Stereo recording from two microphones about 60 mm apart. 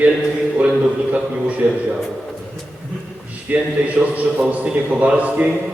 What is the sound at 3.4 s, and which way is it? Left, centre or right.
A man's voice, right.